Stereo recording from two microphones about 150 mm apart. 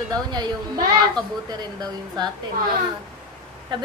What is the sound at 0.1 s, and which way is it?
Speech, 30° right (ahead or behind).